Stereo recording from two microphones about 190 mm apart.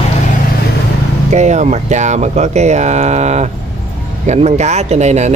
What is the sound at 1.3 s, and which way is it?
Speech, 40° right (ahead or behind).